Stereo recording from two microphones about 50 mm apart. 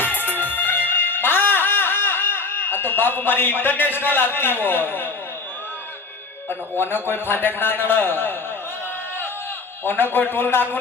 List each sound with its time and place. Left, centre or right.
0.0 s music: left
6.5 s a man's voice: left
9.8 s a man's voice: left